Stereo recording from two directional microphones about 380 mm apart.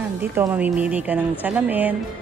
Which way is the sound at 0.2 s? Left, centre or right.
Centre.